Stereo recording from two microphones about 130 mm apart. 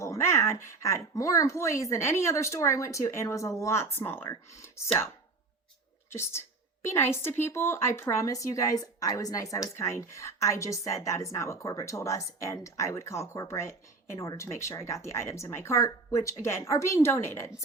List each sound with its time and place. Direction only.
0.0 s speech: 20° left (ahead or behind)
6.1 s speech: 20° left (ahead or behind)